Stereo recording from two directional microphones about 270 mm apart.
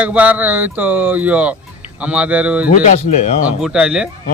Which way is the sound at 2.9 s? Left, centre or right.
Left.